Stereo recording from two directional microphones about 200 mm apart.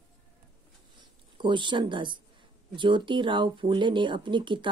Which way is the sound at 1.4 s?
25° right (ahead or behind).